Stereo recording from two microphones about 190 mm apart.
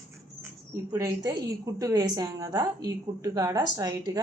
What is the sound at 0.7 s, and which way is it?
A woman's voice, 15° right (ahead or behind).